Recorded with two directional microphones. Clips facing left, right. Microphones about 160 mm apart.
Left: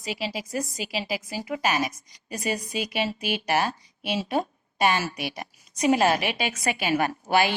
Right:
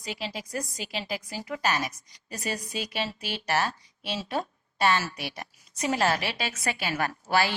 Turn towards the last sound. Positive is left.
turn(degrees=20)  # may be behind; listen again after turning